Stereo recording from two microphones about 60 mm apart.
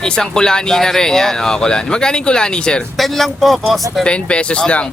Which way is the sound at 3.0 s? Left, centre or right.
Centre.